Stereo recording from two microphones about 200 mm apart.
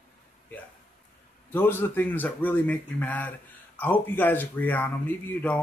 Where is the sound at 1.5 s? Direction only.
10° left (ahead or behind).